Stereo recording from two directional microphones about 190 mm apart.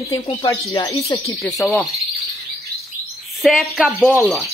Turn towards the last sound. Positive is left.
turn(degrees=0)  # may be behind; listen again after turning